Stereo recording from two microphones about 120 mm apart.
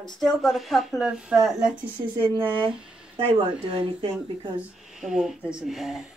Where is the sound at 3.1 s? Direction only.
50° right (ahead or behind).